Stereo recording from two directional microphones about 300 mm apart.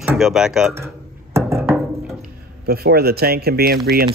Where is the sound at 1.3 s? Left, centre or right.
Centre.